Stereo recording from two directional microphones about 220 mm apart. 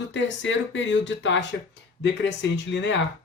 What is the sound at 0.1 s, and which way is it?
Speech, 55° left (ahead or behind).